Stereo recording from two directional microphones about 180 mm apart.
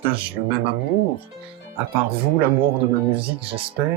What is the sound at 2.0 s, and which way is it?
Speech, 30° right (ahead or behind).